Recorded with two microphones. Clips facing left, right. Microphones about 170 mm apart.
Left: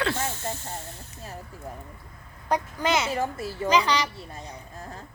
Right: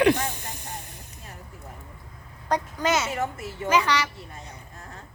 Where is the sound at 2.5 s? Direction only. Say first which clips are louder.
Even; 15° left (ahead or behind).